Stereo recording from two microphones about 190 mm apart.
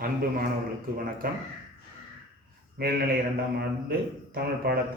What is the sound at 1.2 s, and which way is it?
Speech, 50° right (ahead or behind).